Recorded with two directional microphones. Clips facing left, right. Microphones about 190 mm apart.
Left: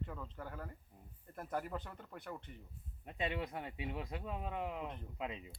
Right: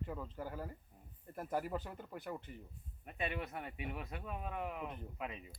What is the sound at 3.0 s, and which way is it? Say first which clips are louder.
Speech: left 1 dB; 20° left (ahead or behind).